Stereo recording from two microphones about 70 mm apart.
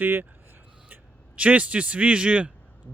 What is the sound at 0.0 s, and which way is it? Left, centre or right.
Speech, right.